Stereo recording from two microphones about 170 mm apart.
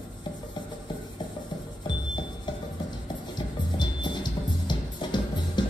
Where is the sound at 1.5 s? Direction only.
25° left (ahead or behind).